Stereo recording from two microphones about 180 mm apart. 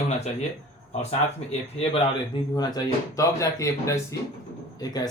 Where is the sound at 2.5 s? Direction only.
20° left (ahead or behind).